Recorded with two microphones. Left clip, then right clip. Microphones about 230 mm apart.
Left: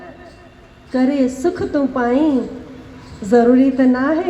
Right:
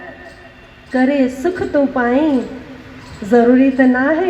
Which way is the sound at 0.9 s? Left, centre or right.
Left.